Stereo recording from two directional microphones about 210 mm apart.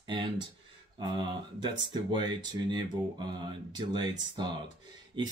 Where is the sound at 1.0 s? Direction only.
20° right (ahead or behind).